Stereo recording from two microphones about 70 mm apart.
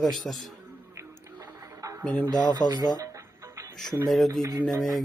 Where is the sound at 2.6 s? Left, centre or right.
Left.